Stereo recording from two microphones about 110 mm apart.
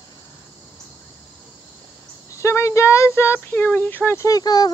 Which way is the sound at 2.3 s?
25° left (ahead or behind).